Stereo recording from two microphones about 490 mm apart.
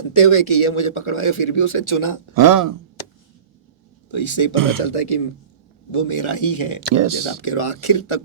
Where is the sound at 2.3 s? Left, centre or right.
Right.